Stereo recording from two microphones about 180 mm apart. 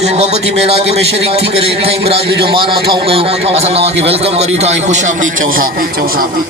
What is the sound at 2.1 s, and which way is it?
Speech, 65° right (ahead or behind).